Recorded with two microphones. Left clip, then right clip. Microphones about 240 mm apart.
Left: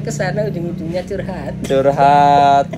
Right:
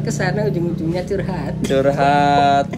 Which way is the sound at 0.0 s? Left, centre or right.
Centre.